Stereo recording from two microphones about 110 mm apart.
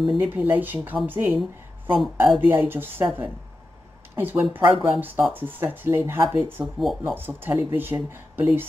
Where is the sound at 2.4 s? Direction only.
20° right (ahead or behind).